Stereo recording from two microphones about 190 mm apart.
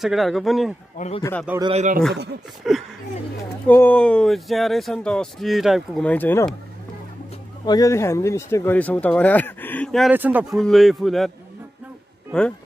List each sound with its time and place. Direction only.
0.0 s speech: centre (ahead or behind)
0.9 s speech: 35° left (ahead or behind)
1.6 s speech: 35° right (ahead or behind)
2.6 s speech: centre (ahead or behind)
3.6 s speech: 10° left (ahead or behind)
7.6 s speech: 20° left (ahead or behind); by 10.1 s centre (ahead or behind)
10.1 s speech: 10° right (ahead or behind)